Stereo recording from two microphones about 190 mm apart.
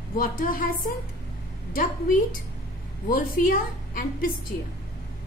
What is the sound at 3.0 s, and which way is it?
A woman's voice, 45° left (ahead or behind).